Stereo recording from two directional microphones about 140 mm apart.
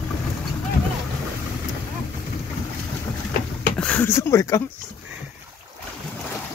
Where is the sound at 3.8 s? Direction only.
10° left (ahead or behind).